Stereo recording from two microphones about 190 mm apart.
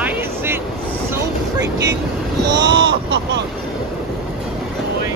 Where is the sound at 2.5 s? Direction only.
20° right (ahead or behind).